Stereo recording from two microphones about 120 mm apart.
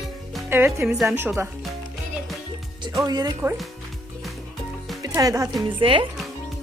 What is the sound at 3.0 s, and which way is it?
Speech, 30° right (ahead or behind).